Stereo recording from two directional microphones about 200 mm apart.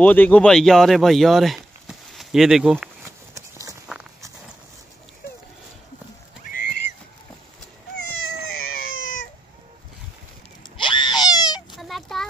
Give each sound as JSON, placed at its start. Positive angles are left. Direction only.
{"t": 0.0, "sound": "speech", "side_deg": 10}
{"t": 3.1, "sound": "walk", "side_deg": -15}
{"t": 6.5, "sound": "a sound", "side_deg": 45}
{"t": 8.9, "sound": "cat", "side_deg": 80}
{"t": 10.8, "sound": "baby cry", "side_deg": 25}
{"t": 11.7, "sound": "a sound", "side_deg": 0}